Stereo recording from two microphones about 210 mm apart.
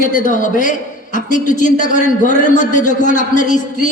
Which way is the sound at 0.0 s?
40° left (ahead or behind).